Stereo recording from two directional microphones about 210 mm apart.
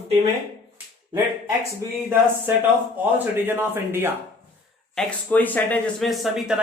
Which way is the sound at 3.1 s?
10° right (ahead or behind).